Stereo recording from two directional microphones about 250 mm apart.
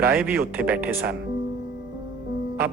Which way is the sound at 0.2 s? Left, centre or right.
Centre.